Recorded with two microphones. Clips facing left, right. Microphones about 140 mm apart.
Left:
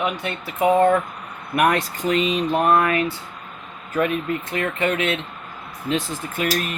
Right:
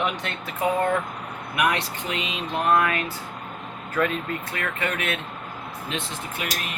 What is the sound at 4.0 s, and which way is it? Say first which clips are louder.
Speech: left 4 dB; 20° left (ahead or behind).